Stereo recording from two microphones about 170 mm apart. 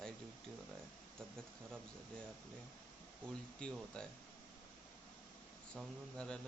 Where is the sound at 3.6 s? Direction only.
5° left (ahead or behind).